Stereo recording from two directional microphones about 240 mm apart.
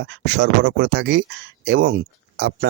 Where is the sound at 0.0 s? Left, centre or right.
Right.